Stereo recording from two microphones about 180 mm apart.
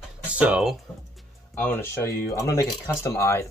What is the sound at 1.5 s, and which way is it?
Speech, 10° left (ahead or behind).